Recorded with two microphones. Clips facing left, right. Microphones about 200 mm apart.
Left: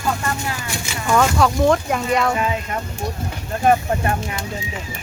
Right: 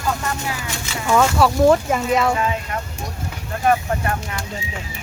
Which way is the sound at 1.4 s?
5° right (ahead or behind).